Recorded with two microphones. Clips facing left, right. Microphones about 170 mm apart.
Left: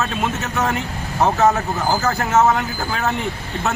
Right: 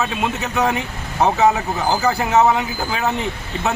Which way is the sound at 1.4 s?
Centre (ahead or behind).